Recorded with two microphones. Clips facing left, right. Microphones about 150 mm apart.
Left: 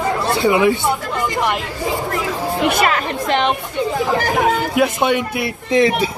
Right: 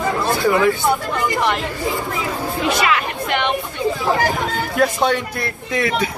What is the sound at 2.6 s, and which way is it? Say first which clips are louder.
Speech: left 2 dB; 50° left (ahead or behind).